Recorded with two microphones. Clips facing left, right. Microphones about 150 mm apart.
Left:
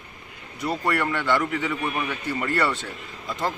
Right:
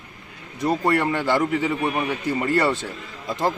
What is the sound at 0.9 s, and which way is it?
A man's voice, 30° right (ahead or behind).